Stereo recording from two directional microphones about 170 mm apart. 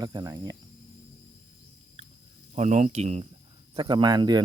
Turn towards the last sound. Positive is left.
turn(degrees=-25)  # may be behind; listen again after turning